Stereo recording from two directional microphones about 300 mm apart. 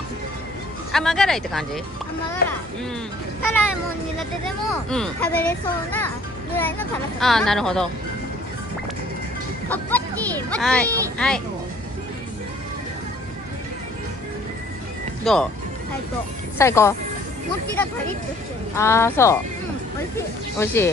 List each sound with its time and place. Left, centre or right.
0.9 s speech: centre
2.4 s speech: left
4.2 s speech: centre
9.7 s a child's voice: centre
15.3 s speech: centre
16.5 s speech: centre
18.8 s speech: centre
20.5 s speech: centre